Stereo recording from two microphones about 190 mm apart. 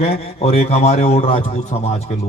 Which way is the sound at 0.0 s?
30° left (ahead or behind).